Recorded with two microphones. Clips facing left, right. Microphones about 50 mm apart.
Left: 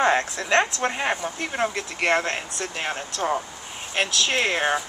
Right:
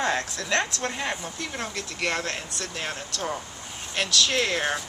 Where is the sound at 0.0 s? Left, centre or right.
Left.